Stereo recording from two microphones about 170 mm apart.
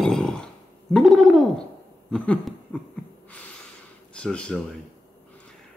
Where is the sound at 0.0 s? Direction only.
5° left (ahead or behind).